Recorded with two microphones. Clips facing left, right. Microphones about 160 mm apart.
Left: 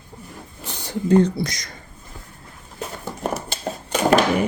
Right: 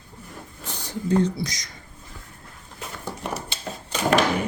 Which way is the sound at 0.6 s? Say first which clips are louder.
Left 4 dB; 65° left (ahead or behind).